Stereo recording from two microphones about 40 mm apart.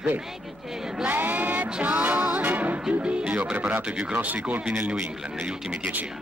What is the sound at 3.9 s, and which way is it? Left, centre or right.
Speech, right.